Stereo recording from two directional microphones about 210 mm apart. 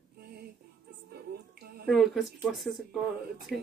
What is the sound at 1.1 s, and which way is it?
Music, 50° right (ahead or behind).